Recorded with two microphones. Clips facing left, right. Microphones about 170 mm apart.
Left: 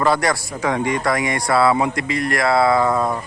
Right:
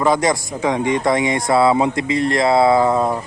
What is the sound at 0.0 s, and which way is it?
Speech, 20° right (ahead or behind).